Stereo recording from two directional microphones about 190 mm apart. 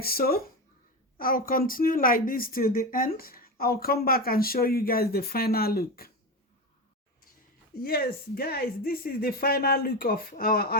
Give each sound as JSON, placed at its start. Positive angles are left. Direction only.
{"t": 0.0, "sound": "a woman's voice", "side_deg": 50}
{"t": 7.8, "sound": "a woman's voice", "side_deg": 55}